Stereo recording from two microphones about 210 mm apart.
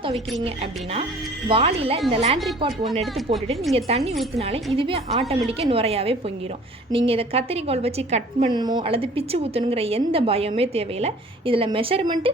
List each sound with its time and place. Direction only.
0.4 s a woman's voice: 25° right (ahead or behind)
3.8 s a woman's voice: 30° right (ahead or behind)